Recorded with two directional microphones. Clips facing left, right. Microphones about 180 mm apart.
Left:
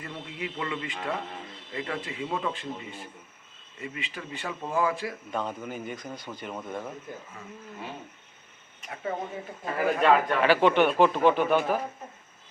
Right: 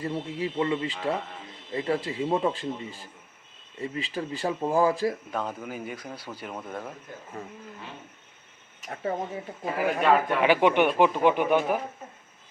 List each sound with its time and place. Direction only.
0.0 s speech: 30° right (ahead or behind)
5.3 s speech: 5° right (ahead or behind)
10.0 s a man's voice: 10° right (ahead or behind)